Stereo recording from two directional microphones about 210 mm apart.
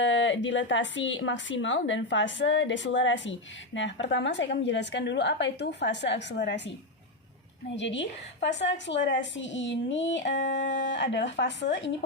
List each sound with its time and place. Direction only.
0.0 s a woman's voice: 60° left (ahead or behind)
7.8 s a woman's voice: 60° left (ahead or behind)